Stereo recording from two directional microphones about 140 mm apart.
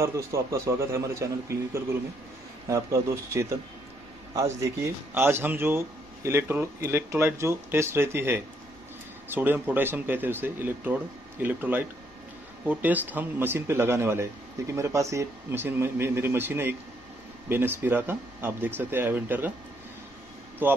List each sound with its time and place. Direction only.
0.0 s a man's voice: 25° right (ahead or behind)
20.6 s speech: 15° right (ahead or behind)